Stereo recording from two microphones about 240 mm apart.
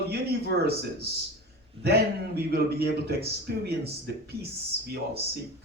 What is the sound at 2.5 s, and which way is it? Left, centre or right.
Speech, right.